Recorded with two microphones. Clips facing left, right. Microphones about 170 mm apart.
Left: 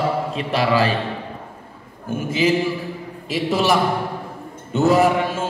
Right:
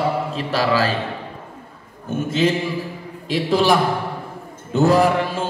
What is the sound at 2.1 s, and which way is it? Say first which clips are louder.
Mantra: even; 10° left (ahead or behind).